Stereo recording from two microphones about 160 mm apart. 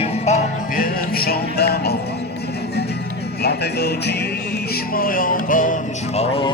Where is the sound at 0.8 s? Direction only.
70° left (ahead or behind); by 2.0 s 85° left.